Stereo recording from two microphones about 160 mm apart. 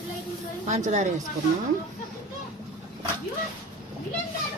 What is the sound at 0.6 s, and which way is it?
Speech, 50° right (ahead or behind).